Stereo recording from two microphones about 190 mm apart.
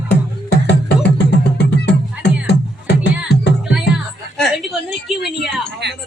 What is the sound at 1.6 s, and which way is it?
Music, 65° left (ahead or behind).